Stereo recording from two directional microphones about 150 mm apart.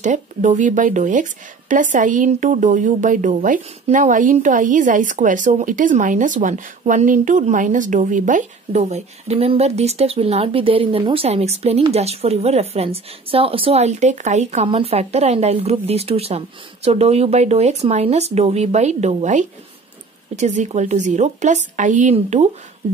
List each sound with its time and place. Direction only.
0.0 s a woman's voice: 55° right (ahead or behind)